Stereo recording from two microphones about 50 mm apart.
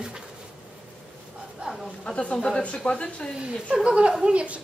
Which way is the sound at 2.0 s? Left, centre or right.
Left.